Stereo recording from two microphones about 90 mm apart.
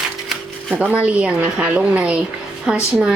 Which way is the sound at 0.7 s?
20° right (ahead or behind).